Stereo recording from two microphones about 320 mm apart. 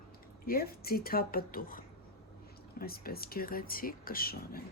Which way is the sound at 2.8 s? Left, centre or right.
Left.